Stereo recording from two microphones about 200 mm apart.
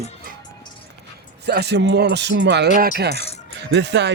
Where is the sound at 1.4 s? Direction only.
55° right (ahead or behind).